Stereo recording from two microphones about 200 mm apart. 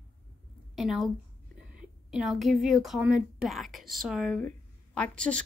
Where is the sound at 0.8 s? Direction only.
Centre (ahead or behind).